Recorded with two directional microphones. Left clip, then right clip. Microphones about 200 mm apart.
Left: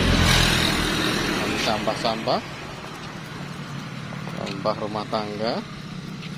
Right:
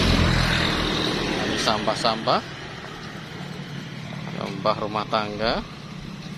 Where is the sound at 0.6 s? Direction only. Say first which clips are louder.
Left 1 dB; 55° left (ahead or behind).